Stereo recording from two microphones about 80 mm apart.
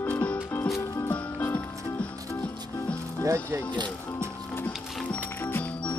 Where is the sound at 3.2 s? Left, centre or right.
Right.